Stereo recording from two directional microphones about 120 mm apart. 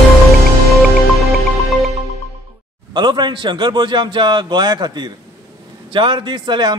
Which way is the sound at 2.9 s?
40° right (ahead or behind).